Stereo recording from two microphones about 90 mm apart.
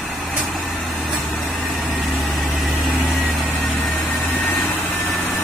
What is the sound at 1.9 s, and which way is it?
Vehicle, centre (ahead or behind).